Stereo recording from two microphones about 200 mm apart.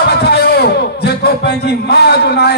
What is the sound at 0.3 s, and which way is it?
A man's voice, 55° left (ahead or behind).